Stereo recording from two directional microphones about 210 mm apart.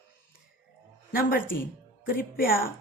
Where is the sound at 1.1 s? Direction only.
45° left (ahead or behind).